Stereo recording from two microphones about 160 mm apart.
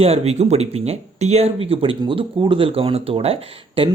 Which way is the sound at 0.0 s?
40° right (ahead or behind).